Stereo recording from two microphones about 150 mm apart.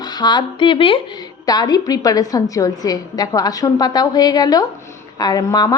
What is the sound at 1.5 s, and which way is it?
A woman's voice, 25° left (ahead or behind).